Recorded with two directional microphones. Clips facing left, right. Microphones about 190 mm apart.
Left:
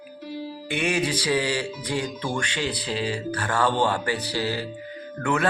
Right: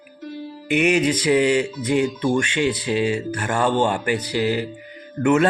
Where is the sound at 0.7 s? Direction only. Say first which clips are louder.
Right 7 dB; 20° right (ahead or behind).